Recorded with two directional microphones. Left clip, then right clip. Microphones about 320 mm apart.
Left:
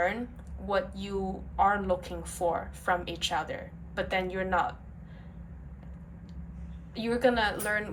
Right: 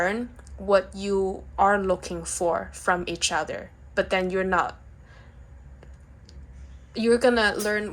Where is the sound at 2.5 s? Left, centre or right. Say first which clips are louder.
Right 5 dB; centre.